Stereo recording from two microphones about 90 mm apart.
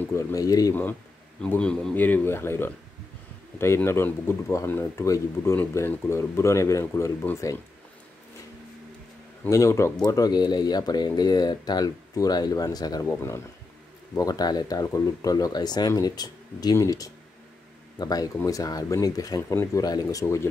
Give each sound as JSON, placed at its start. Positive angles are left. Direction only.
{"t": 0.1, "sound": "speech", "side_deg": 35}
{"t": 1.6, "sound": "speech", "side_deg": 10}
{"t": 2.0, "sound": "speech", "side_deg": 20}
{"t": 9.5, "sound": "speech", "side_deg": 35}
{"t": 10.0, "sound": "speech", "side_deg": 45}
{"t": 13.0, "sound": "speech", "side_deg": 30}
{"t": 14.1, "sound": "speech", "side_deg": 45}